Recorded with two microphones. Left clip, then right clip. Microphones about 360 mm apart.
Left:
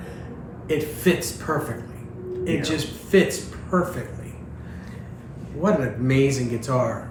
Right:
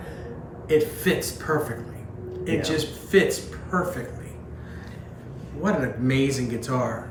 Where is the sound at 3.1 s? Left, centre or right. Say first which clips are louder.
Left 1 dB; centre.